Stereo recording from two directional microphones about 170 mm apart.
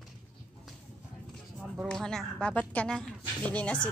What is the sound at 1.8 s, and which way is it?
A woman's voice, 5° left (ahead or behind).